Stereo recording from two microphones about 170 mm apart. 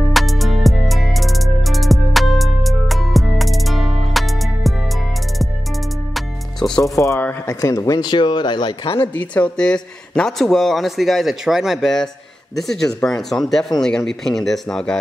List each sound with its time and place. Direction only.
0.1 s music: centre (ahead or behind)
6.1 s music: centre (ahead or behind)
6.8 s speech: 15° left (ahead or behind)
9.3 s speech: 5° left (ahead or behind)